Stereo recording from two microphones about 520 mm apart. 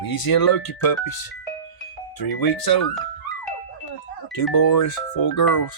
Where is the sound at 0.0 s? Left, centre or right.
Left.